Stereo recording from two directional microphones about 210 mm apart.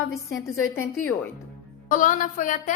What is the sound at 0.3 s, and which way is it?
Speech, 15° left (ahead or behind).